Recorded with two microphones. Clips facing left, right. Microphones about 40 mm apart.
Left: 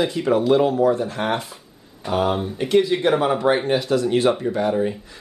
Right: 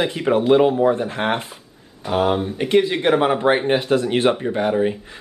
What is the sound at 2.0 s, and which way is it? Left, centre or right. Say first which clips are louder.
Speech: right 2 dB; centre.